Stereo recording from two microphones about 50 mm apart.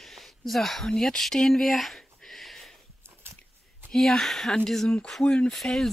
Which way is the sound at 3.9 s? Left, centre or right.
Centre.